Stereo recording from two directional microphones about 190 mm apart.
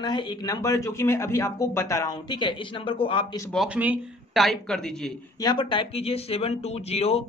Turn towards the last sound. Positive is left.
turn(degrees=30)  # may be behind; listen again after turning